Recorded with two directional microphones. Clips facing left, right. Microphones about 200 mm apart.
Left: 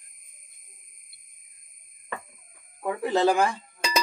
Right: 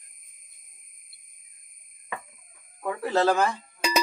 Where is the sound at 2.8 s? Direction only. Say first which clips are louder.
Left 1 dB; 15° left (ahead or behind).